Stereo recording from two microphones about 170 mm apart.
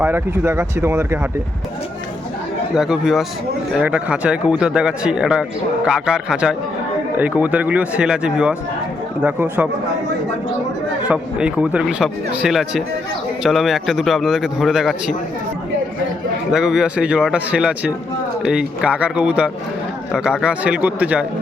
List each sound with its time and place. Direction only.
0.0 s speech: 15° right (ahead or behind)
2.7 s a man's voice: 5° right (ahead or behind)
11.1 s a man's voice: 5° right (ahead or behind)
16.5 s a man's voice: 5° right (ahead or behind)